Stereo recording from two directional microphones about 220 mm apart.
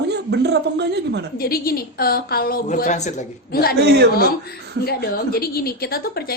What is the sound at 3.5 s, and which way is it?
Speech, 45° left (ahead or behind).